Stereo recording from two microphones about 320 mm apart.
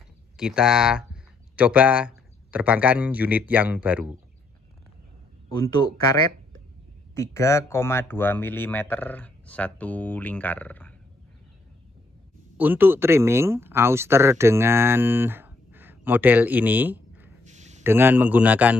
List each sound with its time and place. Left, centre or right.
0.4 s speech: centre
7.2 s speech: centre
12.5 s speech: centre
17.5 s a sound: right
17.8 s speech: centre